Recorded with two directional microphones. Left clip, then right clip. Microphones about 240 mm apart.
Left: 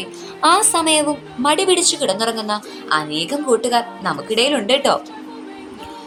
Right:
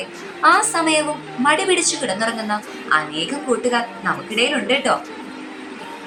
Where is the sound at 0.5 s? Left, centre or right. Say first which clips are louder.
Left 1 dB; left.